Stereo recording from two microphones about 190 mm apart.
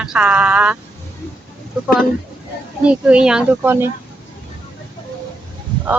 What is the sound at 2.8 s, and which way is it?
Speech, 5° right (ahead or behind).